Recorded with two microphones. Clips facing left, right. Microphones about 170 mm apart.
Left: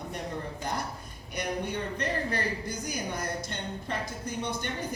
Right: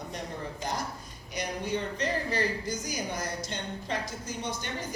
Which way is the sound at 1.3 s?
55° left (ahead or behind).